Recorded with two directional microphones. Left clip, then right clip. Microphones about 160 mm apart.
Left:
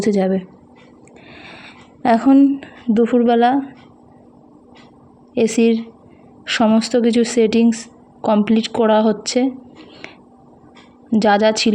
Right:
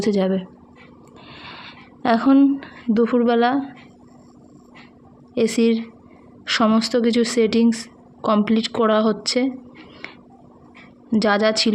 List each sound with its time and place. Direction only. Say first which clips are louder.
0.0 s speech: left 3 dB; 25° left (ahead or behind)
1.3 s a sound: even; 25° left (ahead or behind)
5.3 s speech: left 3 dB; 25° left (ahead or behind)
11.1 s speech: left 4 dB; 25° left (ahead or behind)